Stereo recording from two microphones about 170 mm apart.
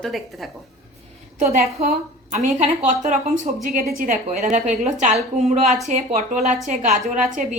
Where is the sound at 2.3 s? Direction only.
40° right (ahead or behind).